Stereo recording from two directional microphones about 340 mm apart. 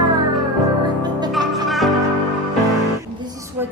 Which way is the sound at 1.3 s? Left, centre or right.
Centre.